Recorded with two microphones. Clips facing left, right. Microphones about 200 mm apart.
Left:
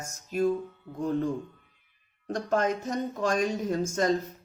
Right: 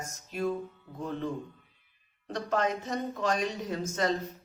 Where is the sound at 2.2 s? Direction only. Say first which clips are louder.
Left 3 dB; 45° left (ahead or behind).